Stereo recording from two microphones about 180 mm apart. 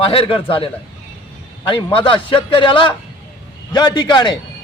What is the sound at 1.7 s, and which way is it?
A man's voice, 30° left (ahead or behind).